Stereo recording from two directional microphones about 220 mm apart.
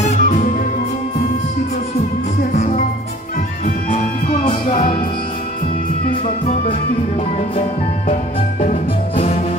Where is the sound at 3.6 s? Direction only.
35° left (ahead or behind).